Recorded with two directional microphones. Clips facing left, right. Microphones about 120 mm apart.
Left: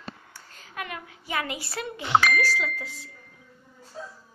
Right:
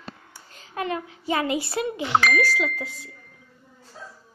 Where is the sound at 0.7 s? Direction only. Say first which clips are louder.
Right 8 dB; 30° right (ahead or behind).